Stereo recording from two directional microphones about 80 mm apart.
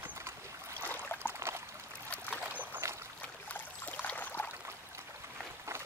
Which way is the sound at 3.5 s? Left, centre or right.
Left.